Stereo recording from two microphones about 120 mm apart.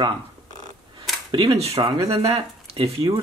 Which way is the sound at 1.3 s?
45° right (ahead or behind).